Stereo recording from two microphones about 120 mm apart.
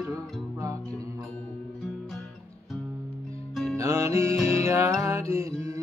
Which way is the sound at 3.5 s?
Centre (ahead or behind).